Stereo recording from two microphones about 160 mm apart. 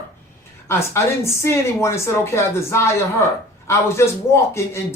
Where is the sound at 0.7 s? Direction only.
15° left (ahead or behind).